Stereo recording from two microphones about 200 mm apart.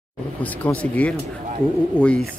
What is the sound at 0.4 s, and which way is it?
Speech, 5° left (ahead or behind).